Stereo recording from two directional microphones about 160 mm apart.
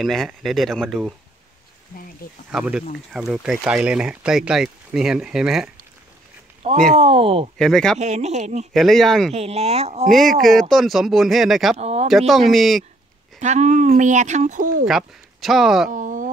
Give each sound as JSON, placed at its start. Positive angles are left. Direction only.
{"t": 0.0, "sound": "speech", "side_deg": 0}
{"t": 2.5, "sound": "speech", "side_deg": -5}
{"t": 6.6, "sound": "speech", "side_deg": -40}
{"t": 7.5, "sound": "speech", "side_deg": 5}
{"t": 8.0, "sound": "speech", "side_deg": -45}
{"t": 8.7, "sound": "speech", "side_deg": 0}
{"t": 9.3, "sound": "speech", "side_deg": -40}
{"t": 10.0, "sound": "speech", "side_deg": 0}
{"t": 11.8, "sound": "speech", "side_deg": -40}
{"t": 12.1, "sound": "speech", "side_deg": 0}
{"t": 13.4, "sound": "speech", "side_deg": -45}
{"t": 14.9, "sound": "speech", "side_deg": 0}
{"t": 15.9, "sound": "speech", "side_deg": -55}